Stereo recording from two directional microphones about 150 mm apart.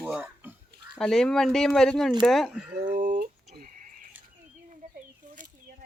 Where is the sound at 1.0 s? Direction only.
5° left (ahead or behind).